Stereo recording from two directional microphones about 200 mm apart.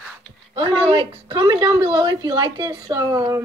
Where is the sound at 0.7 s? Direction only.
25° right (ahead or behind).